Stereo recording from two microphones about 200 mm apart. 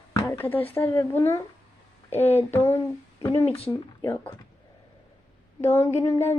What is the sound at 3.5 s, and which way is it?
Speech, 30° left (ahead or behind).